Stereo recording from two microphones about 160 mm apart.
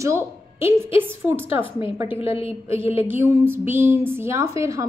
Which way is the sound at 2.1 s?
35° left (ahead or behind).